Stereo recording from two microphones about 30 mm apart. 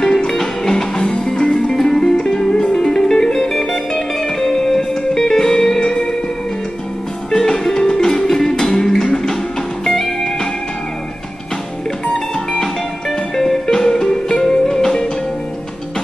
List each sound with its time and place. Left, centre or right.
0.0 s music: centre
5.8 s music: left
7.2 s music: centre
13.4 s music: centre